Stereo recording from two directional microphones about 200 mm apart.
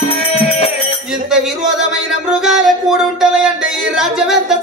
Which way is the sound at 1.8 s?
5° right (ahead or behind).